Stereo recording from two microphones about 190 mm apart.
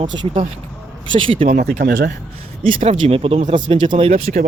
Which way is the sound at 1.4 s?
45° right (ahead or behind).